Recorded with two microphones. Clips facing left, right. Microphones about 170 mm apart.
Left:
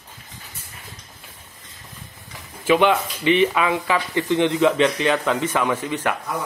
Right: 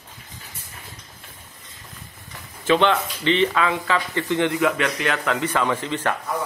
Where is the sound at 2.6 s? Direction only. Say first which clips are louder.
Left 1 dB; 10° left (ahead or behind).